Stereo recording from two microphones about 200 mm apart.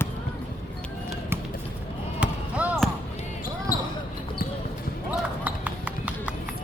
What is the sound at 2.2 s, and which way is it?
Basketball bounce, 5° right (ahead or behind).